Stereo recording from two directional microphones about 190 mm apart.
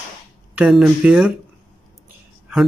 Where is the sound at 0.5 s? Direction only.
Centre (ahead or behind).